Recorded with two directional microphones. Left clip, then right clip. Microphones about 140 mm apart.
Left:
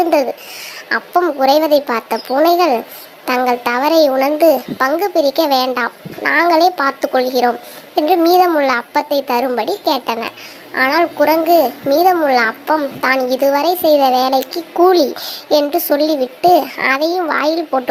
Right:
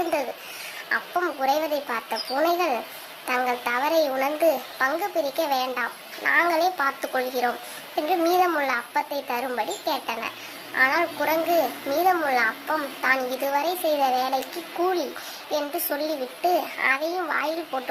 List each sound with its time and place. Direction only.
0.1 s a child's voice: 40° left (ahead or behind)